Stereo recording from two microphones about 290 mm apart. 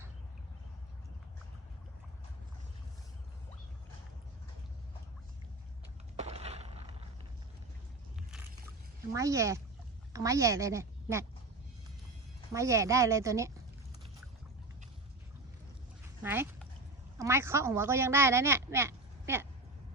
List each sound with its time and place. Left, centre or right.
6.1 s a sound: right
9.1 s a woman's voice: centre
12.5 s speech: centre
16.2 s speech: centre